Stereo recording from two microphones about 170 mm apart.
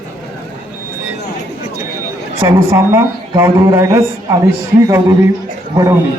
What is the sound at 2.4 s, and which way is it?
A man's voice, 15° right (ahead or behind).